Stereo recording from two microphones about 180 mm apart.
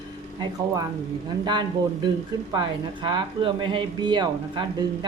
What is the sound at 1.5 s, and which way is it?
Speech, 25° right (ahead or behind).